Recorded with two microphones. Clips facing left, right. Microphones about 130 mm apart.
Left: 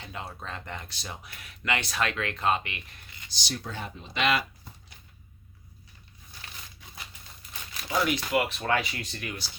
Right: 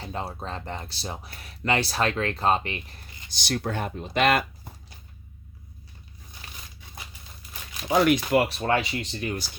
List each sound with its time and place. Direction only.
0.0 s speech: 35° right (ahead or behind)
3.2 s speech: 60° right (ahead or behind)
7.9 s speech: 55° right (ahead or behind); by 9.4 s 30° right (ahead or behind)